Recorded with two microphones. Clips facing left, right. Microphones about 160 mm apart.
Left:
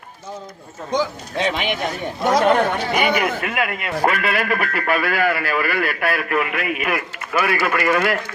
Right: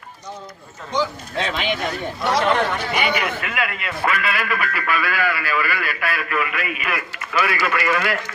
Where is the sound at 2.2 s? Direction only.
45° left (ahead or behind).